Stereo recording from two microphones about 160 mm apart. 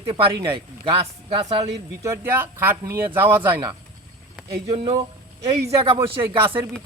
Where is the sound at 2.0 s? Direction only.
15° right (ahead or behind).